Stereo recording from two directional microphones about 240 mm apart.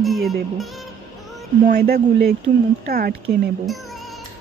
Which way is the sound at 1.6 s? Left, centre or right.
Right.